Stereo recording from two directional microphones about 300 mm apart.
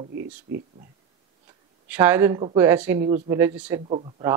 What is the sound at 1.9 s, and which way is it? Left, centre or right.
A man's voice, centre.